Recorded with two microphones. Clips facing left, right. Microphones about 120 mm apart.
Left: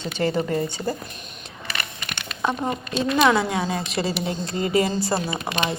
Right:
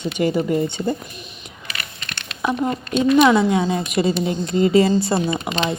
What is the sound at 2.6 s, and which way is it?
Speech, 15° left (ahead or behind).